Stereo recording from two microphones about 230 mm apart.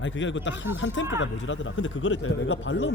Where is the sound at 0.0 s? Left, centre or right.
Left.